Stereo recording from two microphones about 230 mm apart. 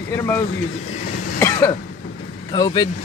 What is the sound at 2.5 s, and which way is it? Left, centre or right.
Speech, centre.